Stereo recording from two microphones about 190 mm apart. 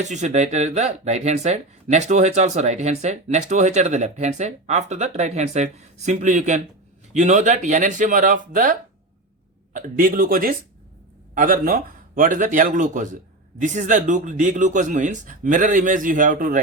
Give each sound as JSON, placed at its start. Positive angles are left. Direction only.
{"t": 0.0, "sound": "speech", "side_deg": -40}